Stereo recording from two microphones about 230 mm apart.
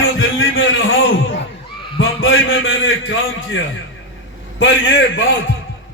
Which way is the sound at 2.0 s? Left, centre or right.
Left.